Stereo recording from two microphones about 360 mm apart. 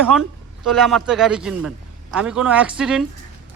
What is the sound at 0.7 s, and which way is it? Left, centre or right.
Speech, centre.